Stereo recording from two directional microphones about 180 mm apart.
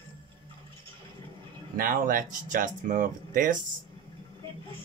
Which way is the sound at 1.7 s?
50° right (ahead or behind).